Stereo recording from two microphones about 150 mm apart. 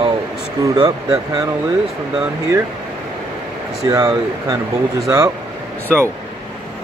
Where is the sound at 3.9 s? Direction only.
25° right (ahead or behind).